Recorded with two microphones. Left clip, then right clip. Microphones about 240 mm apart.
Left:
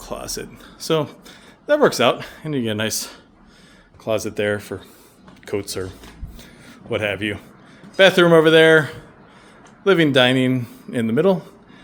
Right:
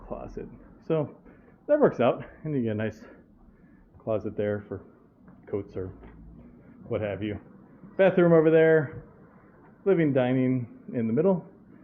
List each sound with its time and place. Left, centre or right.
0.1 s speech: centre
1.6 s a man's voice: centre
6.9 s a man's voice: centre